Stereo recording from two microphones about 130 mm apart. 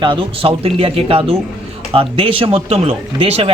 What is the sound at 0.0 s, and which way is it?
A man's voice, 40° right (ahead or behind).